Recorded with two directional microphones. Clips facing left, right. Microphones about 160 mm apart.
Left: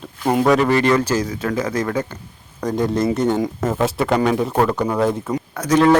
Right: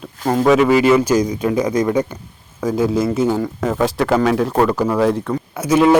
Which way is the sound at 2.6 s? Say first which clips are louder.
Right 2 dB; 5° right (ahead or behind).